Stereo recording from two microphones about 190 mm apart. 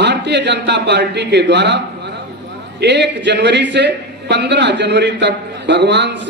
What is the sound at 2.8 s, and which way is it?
A man's voice, 65° right (ahead or behind).